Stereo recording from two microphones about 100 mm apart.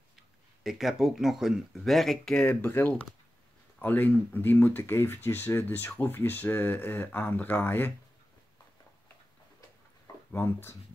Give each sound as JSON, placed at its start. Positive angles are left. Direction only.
{"t": 0.7, "sound": "speech", "side_deg": -5}
{"t": 2.4, "sound": "speech", "side_deg": 20}
{"t": 10.3, "sound": "speech", "side_deg": 20}